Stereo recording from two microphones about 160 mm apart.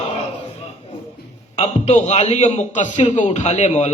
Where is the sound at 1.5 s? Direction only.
45° left (ahead or behind).